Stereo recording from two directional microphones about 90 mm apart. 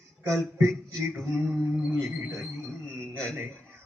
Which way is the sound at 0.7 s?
5° left (ahead or behind).